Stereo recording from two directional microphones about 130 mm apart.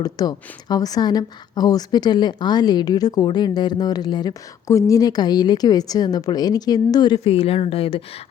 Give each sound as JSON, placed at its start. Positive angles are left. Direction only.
{"t": 0.0, "sound": "a woman's voice", "side_deg": 30}